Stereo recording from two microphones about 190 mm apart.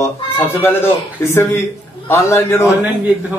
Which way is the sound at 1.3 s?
15° left (ahead or behind).